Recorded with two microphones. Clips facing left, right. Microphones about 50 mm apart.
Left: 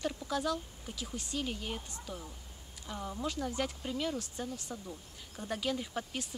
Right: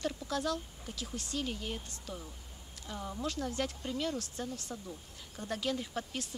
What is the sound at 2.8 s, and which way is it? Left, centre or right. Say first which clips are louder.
Speech: even; centre.